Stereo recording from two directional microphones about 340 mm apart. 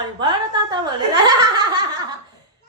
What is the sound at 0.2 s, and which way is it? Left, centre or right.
Chuckle, centre.